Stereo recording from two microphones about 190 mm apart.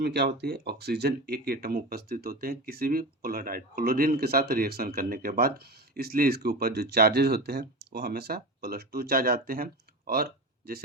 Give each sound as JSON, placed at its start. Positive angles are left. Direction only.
{"t": 0.0, "sound": "speech", "side_deg": -60}